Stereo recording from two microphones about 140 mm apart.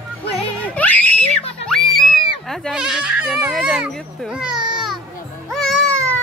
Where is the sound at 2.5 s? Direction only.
Centre (ahead or behind).